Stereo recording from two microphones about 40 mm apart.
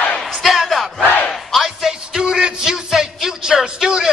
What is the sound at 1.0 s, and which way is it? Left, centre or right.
Battle cry, left.